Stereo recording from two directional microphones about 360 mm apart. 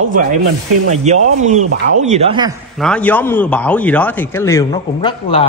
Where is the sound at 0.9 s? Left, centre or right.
Centre.